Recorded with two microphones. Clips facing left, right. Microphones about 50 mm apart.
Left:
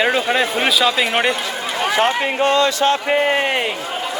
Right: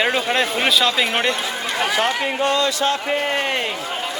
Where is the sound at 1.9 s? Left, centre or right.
Left.